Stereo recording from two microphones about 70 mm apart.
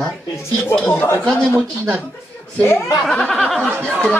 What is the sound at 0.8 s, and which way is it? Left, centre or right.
Speech, left.